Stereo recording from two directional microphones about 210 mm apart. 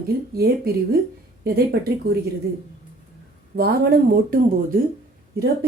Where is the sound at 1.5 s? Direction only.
45° right (ahead or behind).